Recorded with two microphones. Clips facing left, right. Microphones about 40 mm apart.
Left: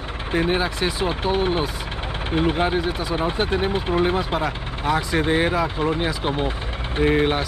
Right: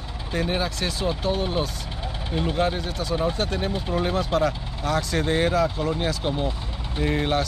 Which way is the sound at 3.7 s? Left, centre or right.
Left.